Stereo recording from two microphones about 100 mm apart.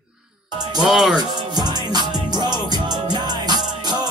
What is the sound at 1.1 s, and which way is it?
Music, 45° right (ahead or behind).